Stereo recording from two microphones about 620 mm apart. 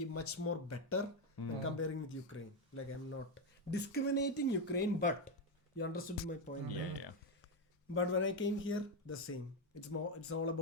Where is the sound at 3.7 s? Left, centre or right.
Centre.